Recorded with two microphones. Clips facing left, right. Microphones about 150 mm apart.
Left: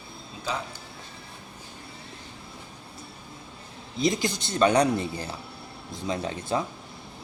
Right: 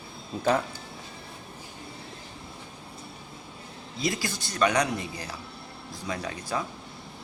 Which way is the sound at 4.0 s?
20° left (ahead or behind).